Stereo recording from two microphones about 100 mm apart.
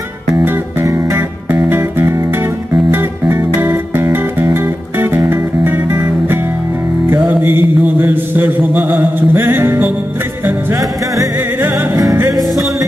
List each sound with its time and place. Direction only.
0.3 s music: 30° right (ahead or behind)
7.2 s mantra: 20° right (ahead or behind)
11.3 s music: 20° right (ahead or behind)